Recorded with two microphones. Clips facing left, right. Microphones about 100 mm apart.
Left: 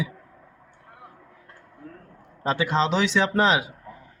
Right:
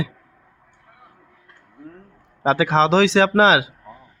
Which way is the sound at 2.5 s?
90° right.